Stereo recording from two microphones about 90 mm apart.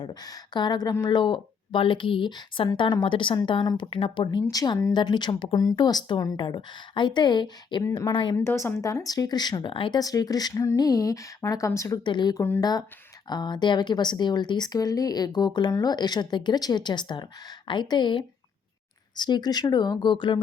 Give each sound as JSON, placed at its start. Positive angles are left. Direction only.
{"t": 0.0, "sound": "speech", "side_deg": 50}
{"t": 3.8, "sound": "speech", "side_deg": 80}
{"t": 4.5, "sound": "speech", "side_deg": 45}
{"t": 4.9, "sound": "speech", "side_deg": 55}
{"t": 5.3, "sound": "speech", "side_deg": 90}
{"t": 5.5, "sound": "speech", "side_deg": 45}
{"t": 8.4, "sound": "a woman's voice", "side_deg": 25}
{"t": 8.8, "sound": "speech", "side_deg": 40}
{"t": 12.0, "sound": "speech", "side_deg": 60}
{"t": 12.5, "sound": "speech", "side_deg": 45}
{"t": 13.2, "sound": "speech", "side_deg": 55}